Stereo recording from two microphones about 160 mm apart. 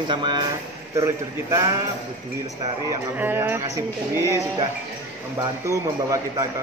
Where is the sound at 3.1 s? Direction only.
15° right (ahead or behind).